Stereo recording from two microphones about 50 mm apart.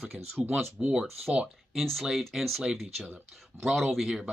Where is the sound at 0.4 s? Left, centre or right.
Right.